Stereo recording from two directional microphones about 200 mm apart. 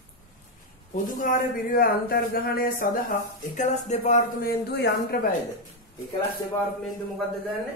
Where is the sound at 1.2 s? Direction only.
45° left (ahead or behind).